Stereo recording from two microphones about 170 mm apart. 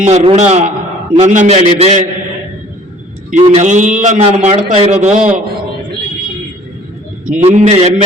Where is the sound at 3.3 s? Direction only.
40° right (ahead or behind).